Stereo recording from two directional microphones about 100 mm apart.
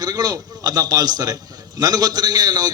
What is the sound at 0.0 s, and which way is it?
A man's voice, 35° right (ahead or behind).